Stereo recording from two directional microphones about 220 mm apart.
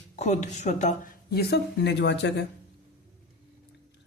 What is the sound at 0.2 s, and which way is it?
Speech, 30° left (ahead or behind).